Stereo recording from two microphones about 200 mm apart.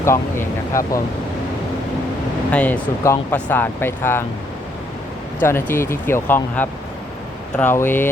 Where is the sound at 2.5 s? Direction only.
5° left (ahead or behind).